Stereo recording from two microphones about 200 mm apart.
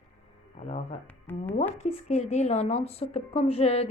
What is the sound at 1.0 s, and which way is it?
Speech, 10° left (ahead or behind).